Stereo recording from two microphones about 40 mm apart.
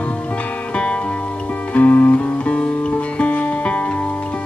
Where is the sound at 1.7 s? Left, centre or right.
Left.